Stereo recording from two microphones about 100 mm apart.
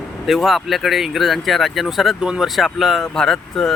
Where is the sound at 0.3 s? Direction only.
Centre (ahead or behind).